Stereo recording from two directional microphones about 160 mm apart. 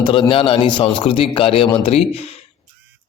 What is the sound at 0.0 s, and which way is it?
A man's voice, 30° left (ahead or behind).